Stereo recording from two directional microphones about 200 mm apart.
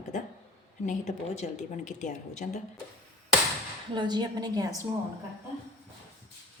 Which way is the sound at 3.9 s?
20° right (ahead or behind).